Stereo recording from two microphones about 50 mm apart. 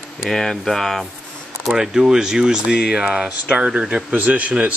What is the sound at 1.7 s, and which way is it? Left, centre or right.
A man's voice, centre.